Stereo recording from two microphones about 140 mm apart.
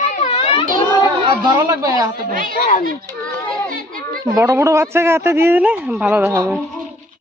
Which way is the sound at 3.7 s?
80° right.